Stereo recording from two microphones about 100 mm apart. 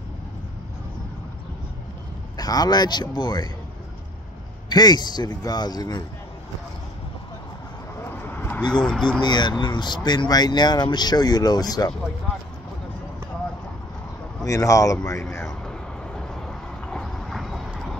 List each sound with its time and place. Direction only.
2.3 s speech: 40° left (ahead or behind)
4.6 s speech: 45° left (ahead or behind)
8.0 s vehicle: 25° left (ahead or behind)
8.7 s speech: 5° left (ahead or behind)
9.2 s speech: 45° left (ahead or behind)
14.4 s speech: 35° left (ahead or behind)
15.6 s vehicle: 10° left (ahead or behind)